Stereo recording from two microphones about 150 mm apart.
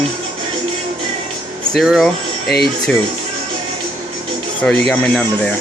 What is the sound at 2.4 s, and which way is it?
Speech, 90° left.